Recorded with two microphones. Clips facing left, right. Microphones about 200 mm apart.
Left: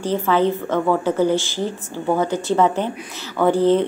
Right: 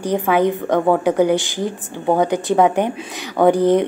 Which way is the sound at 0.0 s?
15° right (ahead or behind).